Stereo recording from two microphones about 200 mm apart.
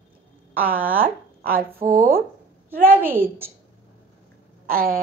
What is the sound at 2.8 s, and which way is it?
Speech, 10° right (ahead or behind).